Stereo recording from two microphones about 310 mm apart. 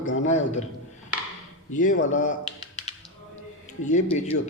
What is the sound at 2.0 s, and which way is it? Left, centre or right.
Speech, left.